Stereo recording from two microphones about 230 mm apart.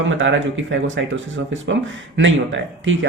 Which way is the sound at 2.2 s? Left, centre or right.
Right.